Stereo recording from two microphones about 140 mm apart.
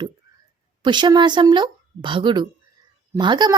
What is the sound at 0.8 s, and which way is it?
Speech, 35° right (ahead or behind).